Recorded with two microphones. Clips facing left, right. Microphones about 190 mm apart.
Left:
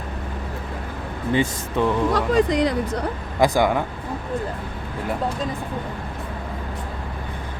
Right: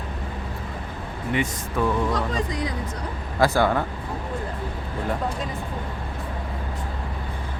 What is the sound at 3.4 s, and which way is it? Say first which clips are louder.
Speech: left 2 dB; 15° left (ahead or behind).